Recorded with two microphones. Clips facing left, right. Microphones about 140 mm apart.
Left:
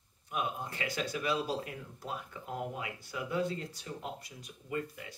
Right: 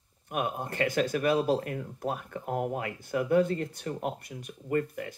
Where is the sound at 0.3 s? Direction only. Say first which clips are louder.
Right 5 dB; 55° right (ahead or behind).